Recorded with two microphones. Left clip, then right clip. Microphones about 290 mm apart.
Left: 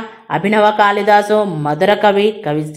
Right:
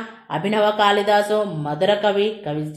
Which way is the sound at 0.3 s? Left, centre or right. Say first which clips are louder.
Left 7 dB; centre.